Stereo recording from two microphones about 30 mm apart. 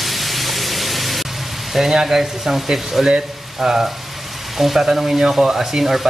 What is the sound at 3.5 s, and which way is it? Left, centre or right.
Frying, centre.